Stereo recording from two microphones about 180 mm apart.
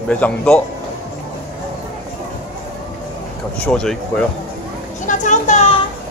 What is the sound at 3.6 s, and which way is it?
Speech, 5° left (ahead or behind).